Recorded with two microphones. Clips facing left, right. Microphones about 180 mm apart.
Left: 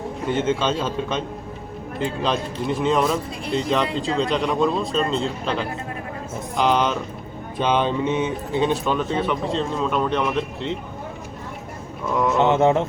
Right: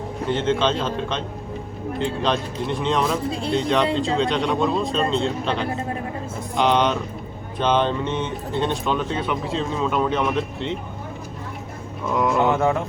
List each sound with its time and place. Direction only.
0.3 s a man's voice: 10° left (ahead or behind)
12.1 s speech: centre (ahead or behind)
12.4 s mantra: 20° left (ahead or behind)